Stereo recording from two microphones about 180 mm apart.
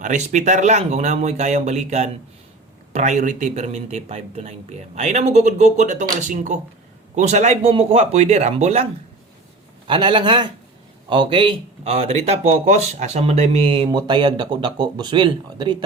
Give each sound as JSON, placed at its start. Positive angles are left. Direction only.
{"t": 0.0, "sound": "speech", "side_deg": -45}